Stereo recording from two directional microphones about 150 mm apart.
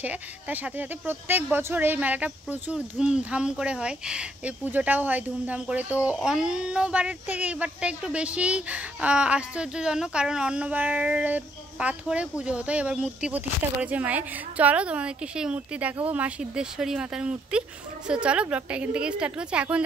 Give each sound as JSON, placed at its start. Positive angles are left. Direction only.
{"t": 0.0, "sound": "speech", "side_deg": -10}